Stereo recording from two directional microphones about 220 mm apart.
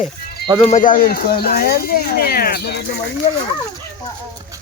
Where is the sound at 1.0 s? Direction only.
40° left (ahead or behind).